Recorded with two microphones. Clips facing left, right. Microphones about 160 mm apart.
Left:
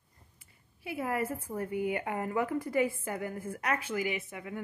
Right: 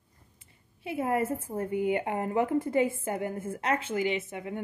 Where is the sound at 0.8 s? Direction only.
25° right (ahead or behind).